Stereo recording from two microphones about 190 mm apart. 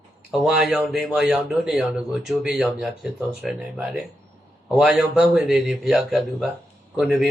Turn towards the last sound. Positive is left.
turn(degrees=-5)  # may be behind; listen again after turning